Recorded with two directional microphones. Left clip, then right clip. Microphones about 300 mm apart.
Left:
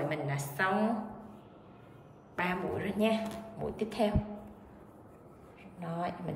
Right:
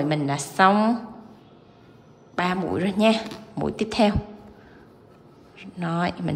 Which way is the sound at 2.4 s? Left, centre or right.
Centre.